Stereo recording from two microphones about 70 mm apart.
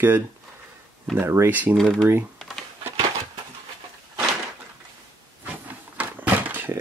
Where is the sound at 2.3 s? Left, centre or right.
Centre.